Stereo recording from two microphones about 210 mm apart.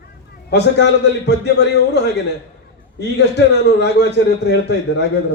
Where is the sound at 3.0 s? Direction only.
55° left (ahead or behind).